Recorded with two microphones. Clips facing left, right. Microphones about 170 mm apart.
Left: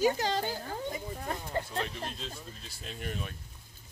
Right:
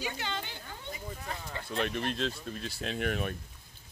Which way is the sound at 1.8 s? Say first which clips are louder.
Right 5 dB; 70° right (ahead or behind).